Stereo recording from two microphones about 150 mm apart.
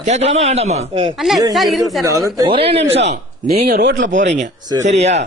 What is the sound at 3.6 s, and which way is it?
Speech, 65° right (ahead or behind).